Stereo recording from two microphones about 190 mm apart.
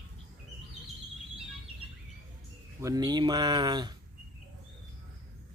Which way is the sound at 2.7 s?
15° right (ahead or behind).